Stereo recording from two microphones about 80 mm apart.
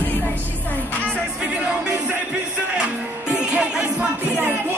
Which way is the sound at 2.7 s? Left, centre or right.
Centre.